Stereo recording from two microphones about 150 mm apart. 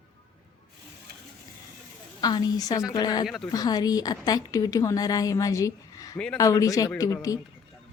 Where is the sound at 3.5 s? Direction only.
25° left (ahead or behind).